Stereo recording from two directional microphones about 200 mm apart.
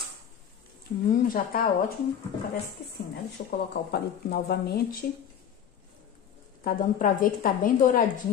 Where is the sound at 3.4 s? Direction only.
45° left (ahead or behind).